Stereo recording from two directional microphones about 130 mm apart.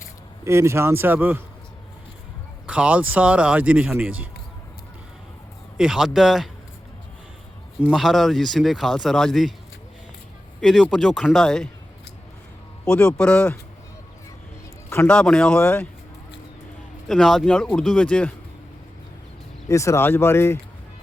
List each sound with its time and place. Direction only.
0.4 s speech: 20° right (ahead or behind)
2.6 s speech: 10° right (ahead or behind)
5.7 s speech: 5° right (ahead or behind)
7.9 s speech: centre (ahead or behind)
10.6 s speech: centre (ahead or behind)
12.9 s speech: 5° left (ahead or behind)
15.0 s speech: 10° left (ahead or behind)
17.1 s speech: 5° left (ahead or behind)
19.6 s speech: 25° left (ahead or behind)